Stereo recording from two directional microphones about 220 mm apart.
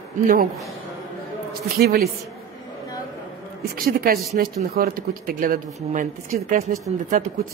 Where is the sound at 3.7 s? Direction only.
40° right (ahead or behind).